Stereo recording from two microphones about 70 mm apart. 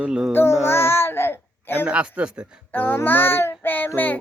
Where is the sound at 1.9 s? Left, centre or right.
Centre.